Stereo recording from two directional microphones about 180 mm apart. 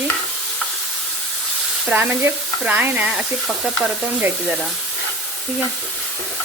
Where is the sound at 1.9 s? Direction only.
10° right (ahead or behind).